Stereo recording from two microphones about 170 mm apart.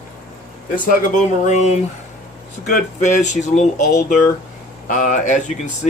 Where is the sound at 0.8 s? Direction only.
55° left (ahead or behind).